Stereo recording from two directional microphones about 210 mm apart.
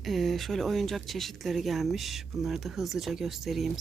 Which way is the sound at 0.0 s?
Centre (ahead or behind).